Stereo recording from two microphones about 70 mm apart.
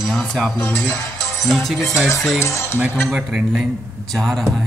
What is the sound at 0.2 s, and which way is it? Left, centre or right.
Speech, centre.